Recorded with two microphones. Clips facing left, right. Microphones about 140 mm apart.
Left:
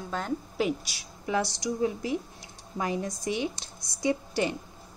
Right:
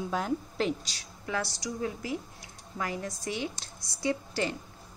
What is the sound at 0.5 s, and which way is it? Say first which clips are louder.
Speech: left 2 dB; 10° left (ahead or behind).